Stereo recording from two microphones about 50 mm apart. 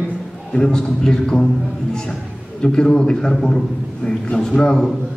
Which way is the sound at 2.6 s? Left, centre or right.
Centre.